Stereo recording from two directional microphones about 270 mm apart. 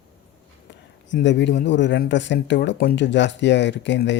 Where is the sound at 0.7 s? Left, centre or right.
Left.